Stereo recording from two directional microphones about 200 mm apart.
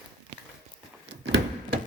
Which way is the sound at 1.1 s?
65° right (ahead or behind).